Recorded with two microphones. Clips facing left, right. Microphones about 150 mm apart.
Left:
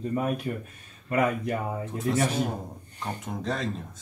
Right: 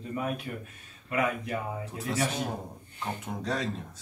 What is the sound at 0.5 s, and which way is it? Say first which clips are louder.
Speech: left 6 dB; 35° left (ahead or behind).